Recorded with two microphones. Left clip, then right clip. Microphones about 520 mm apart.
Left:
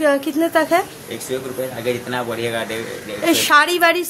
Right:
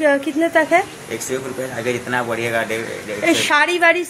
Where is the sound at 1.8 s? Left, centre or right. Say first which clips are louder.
Right 3 dB; left.